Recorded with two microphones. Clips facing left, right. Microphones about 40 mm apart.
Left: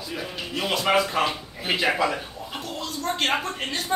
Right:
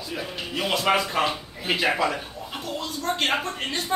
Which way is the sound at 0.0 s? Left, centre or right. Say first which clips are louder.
Even; centre.